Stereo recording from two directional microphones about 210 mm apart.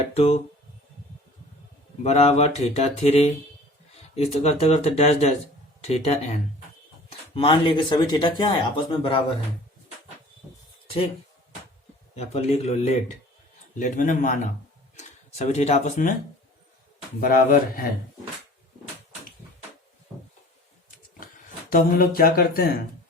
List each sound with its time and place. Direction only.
0.1 s speech: 30° left (ahead or behind)
2.0 s mantra: 30° left (ahead or behind)
4.1 s speech: 30° left (ahead or behind)
5.8 s mantra: 30° left (ahead or behind)
7.1 s speech: 25° left (ahead or behind)
10.8 s a sound: 25° left (ahead or behind)
12.1 s mantra: 30° left (ahead or behind)
14.9 s speech: 35° left (ahead or behind)
17.2 s speech: 45° left (ahead or behind)
21.7 s speech: 45° left (ahead or behind)